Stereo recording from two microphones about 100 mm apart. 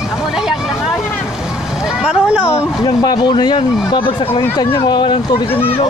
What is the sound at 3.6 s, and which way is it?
Speech, 65° left (ahead or behind).